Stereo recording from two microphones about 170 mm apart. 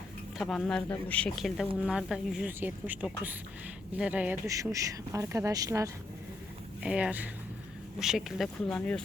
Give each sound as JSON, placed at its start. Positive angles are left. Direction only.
{"t": 0.3, "sound": "speech", "side_deg": 0}
{"t": 4.4, "sound": "speech", "side_deg": -20}
{"t": 6.8, "sound": "speech", "side_deg": -5}
{"t": 8.7, "sound": "speech", "side_deg": 10}